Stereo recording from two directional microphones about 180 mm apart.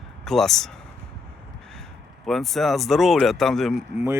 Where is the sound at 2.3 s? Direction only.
Centre (ahead or behind).